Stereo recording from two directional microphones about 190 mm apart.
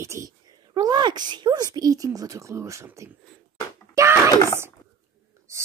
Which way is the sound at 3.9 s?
15° right (ahead or behind).